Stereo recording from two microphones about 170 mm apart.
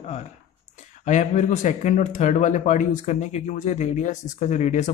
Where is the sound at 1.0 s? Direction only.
45° left (ahead or behind).